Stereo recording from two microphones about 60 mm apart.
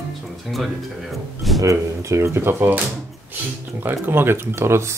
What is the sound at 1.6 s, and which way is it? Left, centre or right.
Speech, right.